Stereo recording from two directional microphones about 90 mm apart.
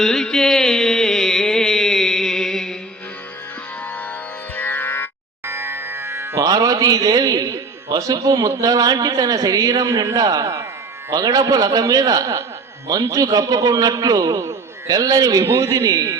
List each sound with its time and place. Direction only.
0.0 s music: 5° left (ahead or behind)
4.5 s music: 20° left (ahead or behind)
5.5 s music: 25° right (ahead or behind)
6.4 s a man's voice: 40° right (ahead or behind)